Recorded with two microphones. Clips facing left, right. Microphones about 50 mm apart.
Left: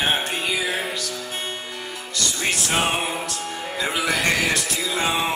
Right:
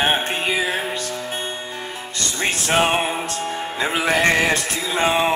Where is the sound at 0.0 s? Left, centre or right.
Right.